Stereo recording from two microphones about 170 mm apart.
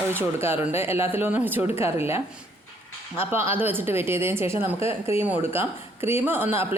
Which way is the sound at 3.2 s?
15° right (ahead or behind).